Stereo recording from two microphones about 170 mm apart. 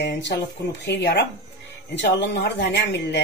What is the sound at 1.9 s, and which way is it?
Speech, 85° left.